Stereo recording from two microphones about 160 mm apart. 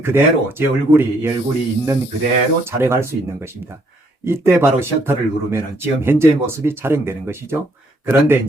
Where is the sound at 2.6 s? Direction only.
15° right (ahead or behind).